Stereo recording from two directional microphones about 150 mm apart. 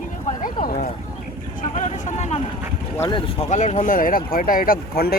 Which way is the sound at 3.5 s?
50° left (ahead or behind).